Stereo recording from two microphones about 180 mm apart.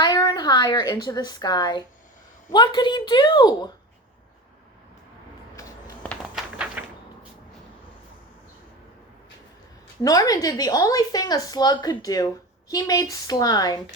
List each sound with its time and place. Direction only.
0.0 s a woman's voice: 20° left (ahead or behind)
6.0 s walk: 5° left (ahead or behind)
6.8 s cupboard open or close: 10° right (ahead or behind)
10.0 s a woman's voice: 20° left (ahead or behind)